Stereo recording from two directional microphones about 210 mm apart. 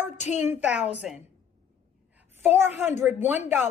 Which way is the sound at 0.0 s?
35° left (ahead or behind).